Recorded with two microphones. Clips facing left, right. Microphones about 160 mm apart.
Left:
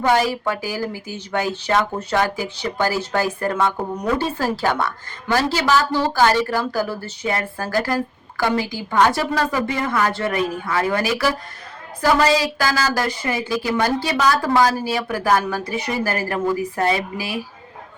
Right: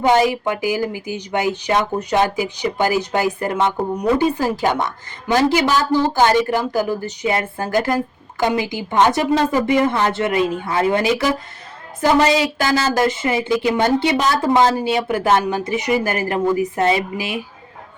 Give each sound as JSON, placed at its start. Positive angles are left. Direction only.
{"t": 0.0, "sound": "a woman's voice", "side_deg": -20}